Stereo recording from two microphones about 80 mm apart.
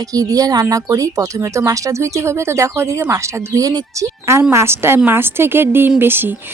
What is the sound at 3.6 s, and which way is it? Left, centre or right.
Speech, right.